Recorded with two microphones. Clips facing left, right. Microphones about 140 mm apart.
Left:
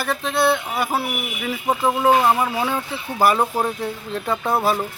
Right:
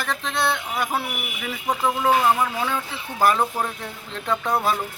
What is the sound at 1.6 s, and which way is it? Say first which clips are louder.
Speech: left 3 dB; 20° left (ahead or behind).